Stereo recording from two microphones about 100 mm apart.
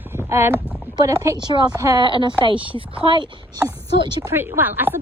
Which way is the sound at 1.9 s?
55° right (ahead or behind).